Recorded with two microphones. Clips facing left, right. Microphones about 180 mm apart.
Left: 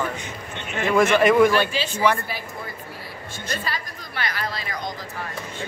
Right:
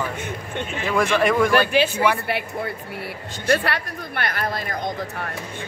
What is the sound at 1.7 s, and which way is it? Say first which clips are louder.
Speech: right 8 dB; 60° right (ahead or behind).